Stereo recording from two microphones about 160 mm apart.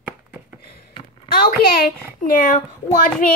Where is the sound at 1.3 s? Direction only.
65° left (ahead or behind).